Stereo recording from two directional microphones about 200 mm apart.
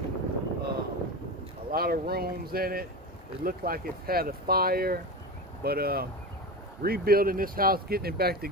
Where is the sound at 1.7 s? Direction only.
50° right (ahead or behind).